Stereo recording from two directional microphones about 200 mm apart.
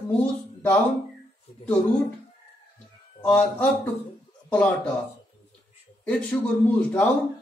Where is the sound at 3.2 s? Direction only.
5° left (ahead or behind).